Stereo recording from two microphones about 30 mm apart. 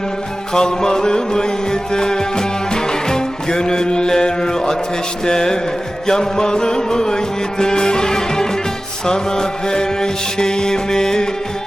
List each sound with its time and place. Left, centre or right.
0.5 s music: left